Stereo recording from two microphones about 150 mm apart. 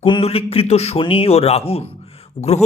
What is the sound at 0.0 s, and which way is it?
A man's voice, 35° left (ahead or behind).